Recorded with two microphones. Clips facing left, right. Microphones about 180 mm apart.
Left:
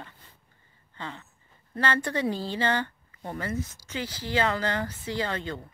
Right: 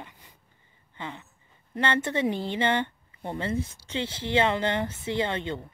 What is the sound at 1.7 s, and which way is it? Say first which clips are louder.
Speech: right 1 dB; 20° right (ahead or behind).